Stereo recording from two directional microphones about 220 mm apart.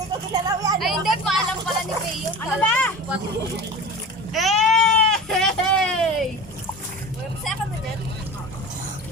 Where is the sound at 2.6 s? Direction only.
5° left (ahead or behind).